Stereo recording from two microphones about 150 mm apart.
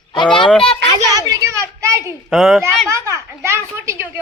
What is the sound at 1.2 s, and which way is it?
Speech, 20° right (ahead or behind).